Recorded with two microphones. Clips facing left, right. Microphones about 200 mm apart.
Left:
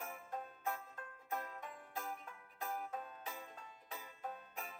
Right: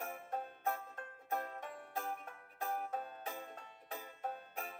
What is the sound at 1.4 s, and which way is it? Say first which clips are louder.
Music: right 4 dB; 35° right (ahead or behind).